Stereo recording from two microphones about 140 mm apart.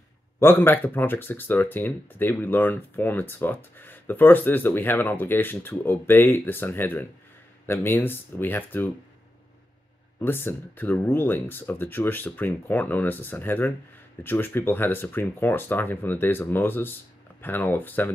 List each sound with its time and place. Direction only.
0.4 s speech: 15° left (ahead or behind)
10.2 s speech: 15° left (ahead or behind)